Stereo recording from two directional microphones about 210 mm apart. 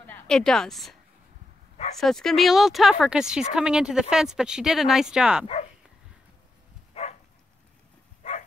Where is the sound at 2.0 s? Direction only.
Centre (ahead or behind).